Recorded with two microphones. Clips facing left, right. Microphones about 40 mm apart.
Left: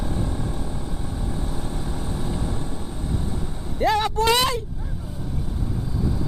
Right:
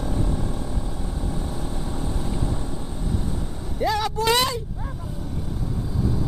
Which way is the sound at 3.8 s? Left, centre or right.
Left.